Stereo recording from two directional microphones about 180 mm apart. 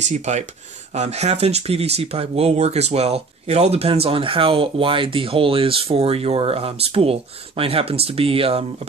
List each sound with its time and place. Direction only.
0.0 s speech: 40° right (ahead or behind)